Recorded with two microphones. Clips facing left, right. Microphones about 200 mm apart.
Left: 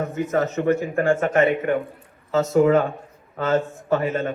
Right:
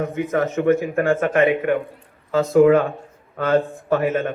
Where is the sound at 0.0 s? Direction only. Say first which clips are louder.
Right 1 dB; 55° right (ahead or behind).